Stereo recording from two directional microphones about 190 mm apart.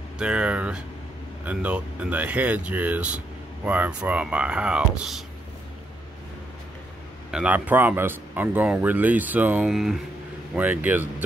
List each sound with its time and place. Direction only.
0.2 s speech: 5° right (ahead or behind)
7.2 s speech: 5° right (ahead or behind)